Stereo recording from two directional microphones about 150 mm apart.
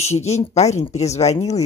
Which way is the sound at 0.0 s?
45° left (ahead or behind).